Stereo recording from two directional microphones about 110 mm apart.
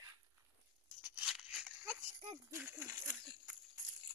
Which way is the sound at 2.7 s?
20° right (ahead or behind).